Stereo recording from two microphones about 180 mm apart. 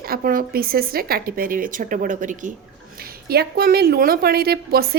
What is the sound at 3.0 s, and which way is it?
A woman's voice, 60° right (ahead or behind).